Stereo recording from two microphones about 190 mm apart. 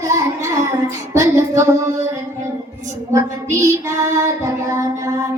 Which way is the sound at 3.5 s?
15° right (ahead or behind).